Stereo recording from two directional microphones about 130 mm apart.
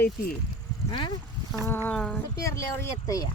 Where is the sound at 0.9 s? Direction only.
40° left (ahead or behind).